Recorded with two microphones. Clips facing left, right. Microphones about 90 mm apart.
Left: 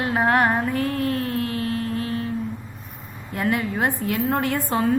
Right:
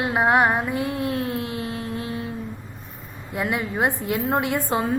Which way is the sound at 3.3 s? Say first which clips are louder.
Left 1 dB; 10° right (ahead or behind).